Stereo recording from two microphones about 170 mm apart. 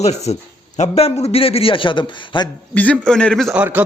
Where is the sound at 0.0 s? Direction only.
40° left (ahead or behind).